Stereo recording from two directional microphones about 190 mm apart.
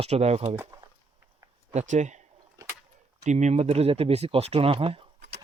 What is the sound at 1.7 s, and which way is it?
Speech, 35° right (ahead or behind).